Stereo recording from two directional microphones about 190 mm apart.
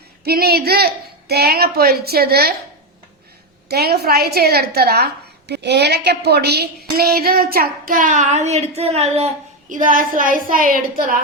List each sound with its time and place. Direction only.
0.3 s speech: 55° right (ahead or behind)
3.7 s a woman's voice: 55° right (ahead or behind)